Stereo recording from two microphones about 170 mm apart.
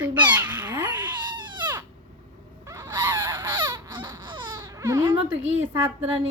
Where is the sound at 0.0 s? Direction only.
10° right (ahead or behind).